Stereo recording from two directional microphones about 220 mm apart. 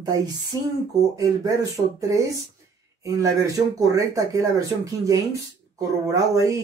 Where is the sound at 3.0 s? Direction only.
15° right (ahead or behind).